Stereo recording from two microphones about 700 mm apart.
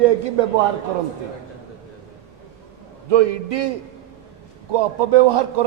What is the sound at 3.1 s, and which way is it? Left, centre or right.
Speech, right.